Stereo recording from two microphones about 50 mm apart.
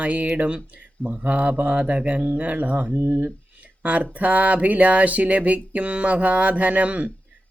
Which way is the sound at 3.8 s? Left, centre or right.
Right.